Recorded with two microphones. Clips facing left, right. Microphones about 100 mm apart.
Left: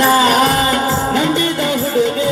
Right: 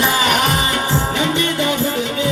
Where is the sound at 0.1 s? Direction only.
35° left (ahead or behind).